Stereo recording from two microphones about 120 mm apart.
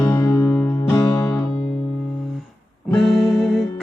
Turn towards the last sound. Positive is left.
turn(degrees=0)  # may be behind; listen again after turning